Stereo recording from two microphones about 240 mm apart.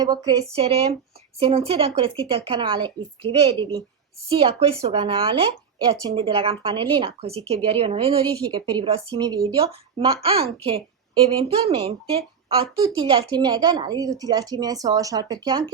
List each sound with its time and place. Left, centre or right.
0.0 s a woman's voice: centre